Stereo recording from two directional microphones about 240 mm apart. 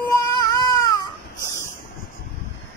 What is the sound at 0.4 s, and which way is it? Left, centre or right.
Baby cry, centre.